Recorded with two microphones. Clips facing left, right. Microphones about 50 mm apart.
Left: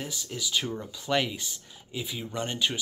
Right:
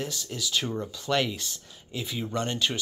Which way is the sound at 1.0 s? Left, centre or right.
Centre.